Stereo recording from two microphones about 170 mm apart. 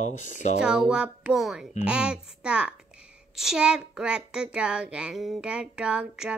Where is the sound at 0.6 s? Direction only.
5° right (ahead or behind).